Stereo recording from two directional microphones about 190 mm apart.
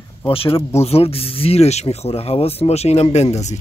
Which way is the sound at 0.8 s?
30° left (ahead or behind).